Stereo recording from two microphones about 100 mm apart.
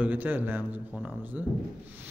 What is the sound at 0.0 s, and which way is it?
A man's voice, 20° right (ahead or behind).